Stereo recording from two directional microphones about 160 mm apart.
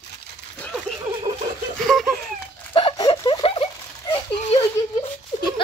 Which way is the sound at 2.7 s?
35° left (ahead or behind).